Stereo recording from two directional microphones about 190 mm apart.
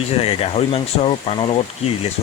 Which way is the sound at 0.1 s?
30° left (ahead or behind).